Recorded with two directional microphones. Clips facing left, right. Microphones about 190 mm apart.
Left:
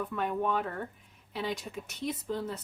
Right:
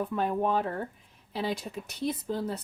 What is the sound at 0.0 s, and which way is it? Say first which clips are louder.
Speech: right 3 dB; 35° right (ahead or behind).